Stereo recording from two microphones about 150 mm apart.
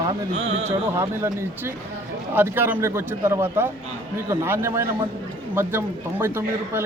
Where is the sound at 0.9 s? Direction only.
15° right (ahead or behind).